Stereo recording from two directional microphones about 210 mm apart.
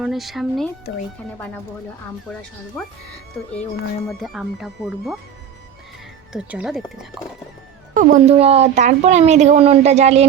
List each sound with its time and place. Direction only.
0.0 s speech: centre (ahead or behind)
4.2 s speech: centre (ahead or behind)
6.3 s speech: 5° right (ahead or behind)
7.9 s speech: 35° right (ahead or behind)